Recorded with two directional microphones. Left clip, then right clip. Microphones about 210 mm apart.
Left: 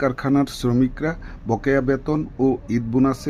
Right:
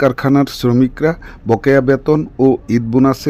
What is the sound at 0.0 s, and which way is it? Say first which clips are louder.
Speech: right 7 dB; 40° right (ahead or behind).